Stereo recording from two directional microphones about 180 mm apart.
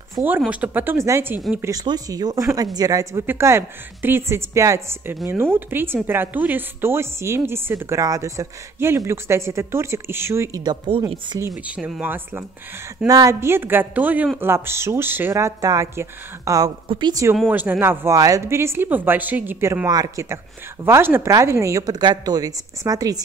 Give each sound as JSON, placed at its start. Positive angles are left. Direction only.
{"t": 0.4, "sound": "a woman's voice", "side_deg": -5}
{"t": 11.5, "sound": "a woman's voice", "side_deg": -5}